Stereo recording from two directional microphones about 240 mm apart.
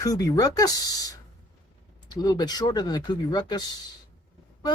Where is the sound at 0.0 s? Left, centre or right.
Centre.